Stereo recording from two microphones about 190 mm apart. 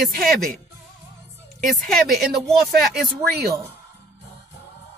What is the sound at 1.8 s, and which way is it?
Speech, centre (ahead or behind).